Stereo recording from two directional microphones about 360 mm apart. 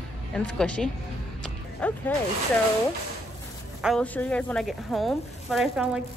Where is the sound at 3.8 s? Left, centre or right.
Centre.